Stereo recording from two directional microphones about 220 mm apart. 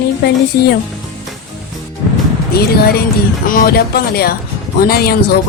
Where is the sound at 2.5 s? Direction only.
45° left (ahead or behind).